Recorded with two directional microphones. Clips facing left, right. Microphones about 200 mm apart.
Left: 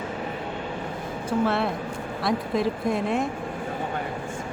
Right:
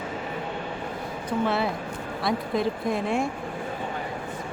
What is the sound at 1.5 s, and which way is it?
Speech, centre (ahead or behind).